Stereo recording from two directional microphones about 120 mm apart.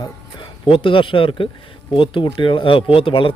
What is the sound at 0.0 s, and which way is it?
Speech, 40° left (ahead or behind).